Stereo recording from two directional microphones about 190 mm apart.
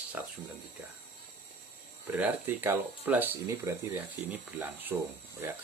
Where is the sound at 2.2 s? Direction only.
10° right (ahead or behind).